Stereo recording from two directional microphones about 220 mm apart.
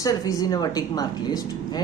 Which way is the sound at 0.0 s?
15° left (ahead or behind).